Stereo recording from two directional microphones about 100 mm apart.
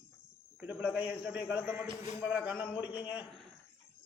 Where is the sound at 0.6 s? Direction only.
10° right (ahead or behind).